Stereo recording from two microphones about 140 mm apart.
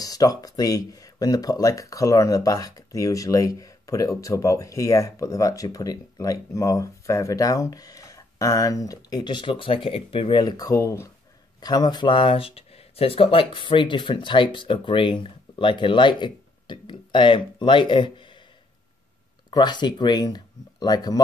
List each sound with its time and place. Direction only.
0.0 s speech: 25° left (ahead or behind)
10.4 s speech: 25° left (ahead or behind)
19.5 s speech: 30° left (ahead or behind)